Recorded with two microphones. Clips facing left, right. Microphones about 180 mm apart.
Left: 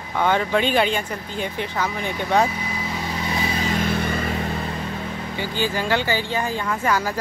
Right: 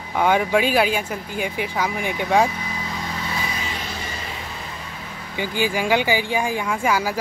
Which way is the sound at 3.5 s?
45° left (ahead or behind).